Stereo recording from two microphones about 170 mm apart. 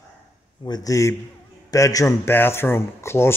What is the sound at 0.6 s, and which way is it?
A man's voice, 20° left (ahead or behind).